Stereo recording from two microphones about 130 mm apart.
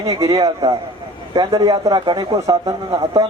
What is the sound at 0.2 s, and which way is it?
Speech, 25° right (ahead or behind).